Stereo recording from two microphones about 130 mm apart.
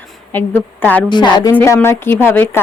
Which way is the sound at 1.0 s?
35° left (ahead or behind).